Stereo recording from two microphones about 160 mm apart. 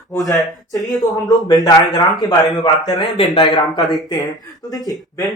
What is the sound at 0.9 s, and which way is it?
Speech, 25° left (ahead or behind).